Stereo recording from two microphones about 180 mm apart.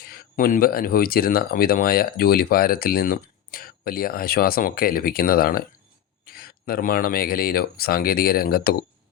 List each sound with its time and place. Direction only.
0.0 s speech: 55° left (ahead or behind)